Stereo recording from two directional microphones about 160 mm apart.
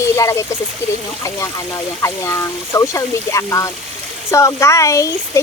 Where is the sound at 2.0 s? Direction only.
20° left (ahead or behind).